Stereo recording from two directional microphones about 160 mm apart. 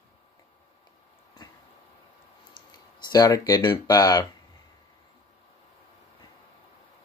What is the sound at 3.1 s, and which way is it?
Speech, 25° left (ahead or behind).